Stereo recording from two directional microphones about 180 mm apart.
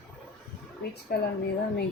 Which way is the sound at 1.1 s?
60° left (ahead or behind).